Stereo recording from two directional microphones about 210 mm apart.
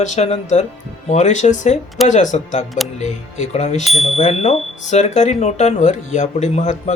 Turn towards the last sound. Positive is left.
turn(degrees=35)  # may be behind; listen again after turning